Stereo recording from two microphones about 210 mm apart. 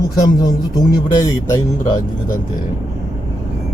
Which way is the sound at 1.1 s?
20° left (ahead or behind).